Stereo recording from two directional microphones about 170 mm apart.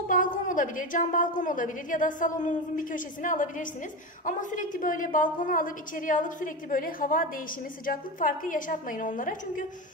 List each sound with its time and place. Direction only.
0.1 s a woman's voice: 50° left (ahead or behind)